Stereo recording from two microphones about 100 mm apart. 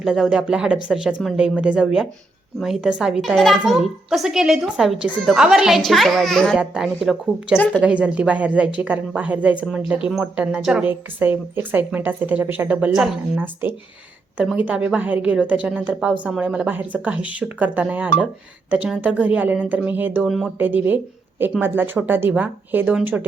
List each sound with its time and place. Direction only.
0.0 s a woman's voice: 5° right (ahead or behind)
6.6 s a child's voice: 5° right (ahead or behind)
7.5 s a woman's voice: 15° left (ahead or behind)
7.8 s a woman's voice: 15° right (ahead or behind)
10.8 s a woman's voice: 20° right (ahead or behind)
12.9 s a child's voice: 5° right (ahead or behind)
13.3 s a woman's voice: 20° right (ahead or behind)
20.2 s a child's voice: centre (ahead or behind)
20.6 s a woman's voice: 20° right (ahead or behind)